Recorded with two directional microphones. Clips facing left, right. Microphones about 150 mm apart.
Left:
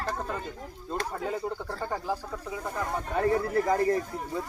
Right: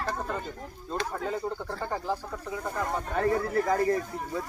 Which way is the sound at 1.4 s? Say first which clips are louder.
Even; 5° left (ahead or behind).